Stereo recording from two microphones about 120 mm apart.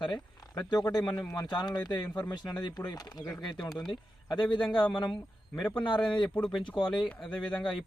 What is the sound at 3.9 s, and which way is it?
Speech, 40° left (ahead or behind).